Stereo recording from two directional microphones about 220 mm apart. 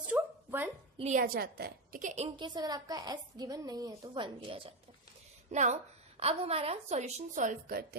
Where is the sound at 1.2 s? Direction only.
45° right (ahead or behind).